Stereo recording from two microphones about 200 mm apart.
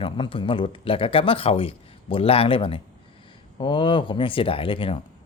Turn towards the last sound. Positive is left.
turn(degrees=25)  # may be behind; listen again after turning